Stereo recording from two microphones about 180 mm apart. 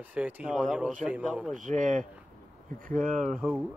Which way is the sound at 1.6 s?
45° right (ahead or behind).